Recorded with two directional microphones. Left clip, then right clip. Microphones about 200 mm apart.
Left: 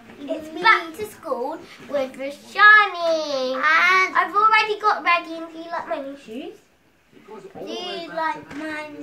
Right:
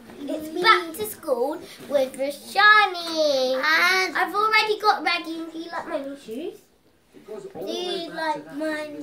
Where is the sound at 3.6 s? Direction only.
5° right (ahead or behind).